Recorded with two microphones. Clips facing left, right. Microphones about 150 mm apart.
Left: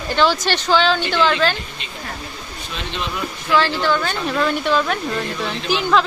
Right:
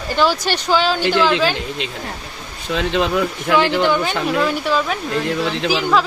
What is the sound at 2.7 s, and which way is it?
Speech, 90° right.